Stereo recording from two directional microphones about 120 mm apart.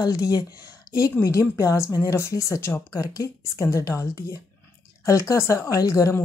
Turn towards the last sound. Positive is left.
turn(degrees=25)  # may be behind; listen again after turning